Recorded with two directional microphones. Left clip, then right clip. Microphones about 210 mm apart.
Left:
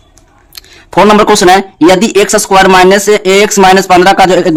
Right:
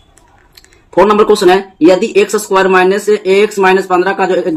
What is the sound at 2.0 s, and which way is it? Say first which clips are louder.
Speech: left 4 dB; 50° left (ahead or behind).